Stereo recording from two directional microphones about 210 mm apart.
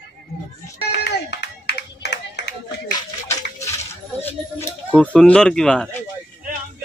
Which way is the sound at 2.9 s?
15° left (ahead or behind).